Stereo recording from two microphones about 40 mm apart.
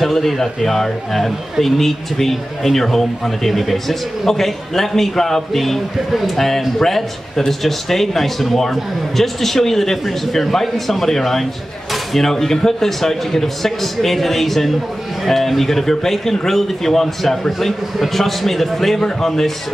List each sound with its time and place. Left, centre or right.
0.0 s a man's voice: centre